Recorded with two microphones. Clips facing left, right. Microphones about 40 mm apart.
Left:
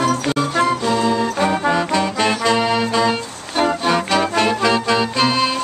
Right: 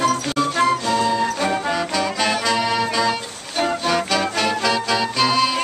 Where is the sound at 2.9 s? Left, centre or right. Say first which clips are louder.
Left 3 dB; centre.